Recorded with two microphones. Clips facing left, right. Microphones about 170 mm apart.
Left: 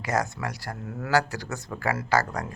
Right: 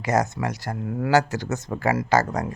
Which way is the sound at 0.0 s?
20° right (ahead or behind).